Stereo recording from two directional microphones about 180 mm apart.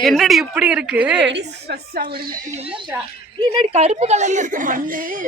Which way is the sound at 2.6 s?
30° right (ahead or behind).